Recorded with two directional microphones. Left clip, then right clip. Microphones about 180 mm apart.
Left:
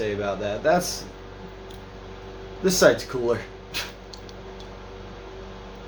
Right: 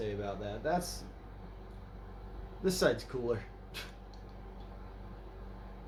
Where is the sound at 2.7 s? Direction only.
5° right (ahead or behind).